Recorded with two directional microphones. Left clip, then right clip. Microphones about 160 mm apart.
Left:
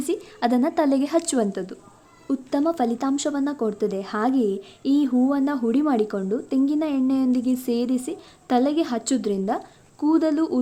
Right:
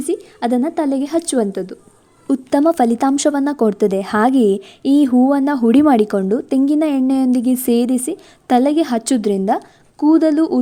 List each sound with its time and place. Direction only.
0.0 s a woman's voice: 20° right (ahead or behind)
2.2 s speech: 50° right (ahead or behind)